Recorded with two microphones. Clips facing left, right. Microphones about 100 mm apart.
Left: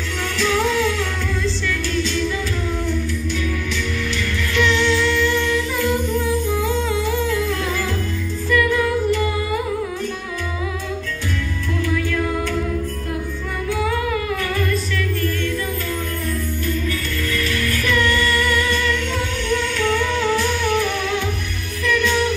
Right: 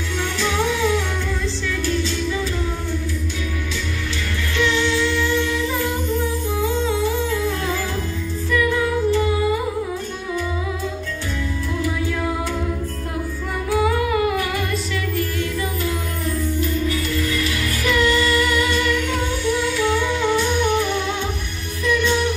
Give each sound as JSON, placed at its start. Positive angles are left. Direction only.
{"t": 0.4, "sound": "music", "side_deg": -15}
{"t": 4.6, "sound": "humming", "side_deg": -20}
{"t": 8.5, "sound": "music", "side_deg": -20}
{"t": 16.6, "sound": "music", "side_deg": -15}
{"t": 19.4, "sound": "humming", "side_deg": -15}
{"t": 21.8, "sound": "music", "side_deg": -25}